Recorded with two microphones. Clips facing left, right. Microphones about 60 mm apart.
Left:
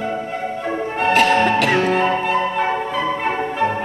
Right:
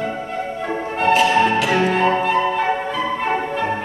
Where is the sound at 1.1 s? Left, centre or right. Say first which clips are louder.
Left 1 dB; left.